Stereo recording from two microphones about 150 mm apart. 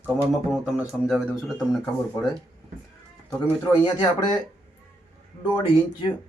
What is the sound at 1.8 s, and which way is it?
Speech, 20° left (ahead or behind).